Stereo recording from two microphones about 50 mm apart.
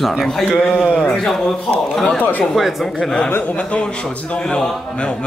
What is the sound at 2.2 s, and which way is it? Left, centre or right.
Speech, left.